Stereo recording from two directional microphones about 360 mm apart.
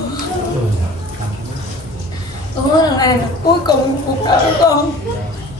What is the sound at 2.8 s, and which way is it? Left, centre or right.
Speech, centre.